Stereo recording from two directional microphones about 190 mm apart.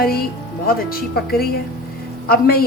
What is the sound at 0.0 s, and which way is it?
Speech, 50° left (ahead or behind).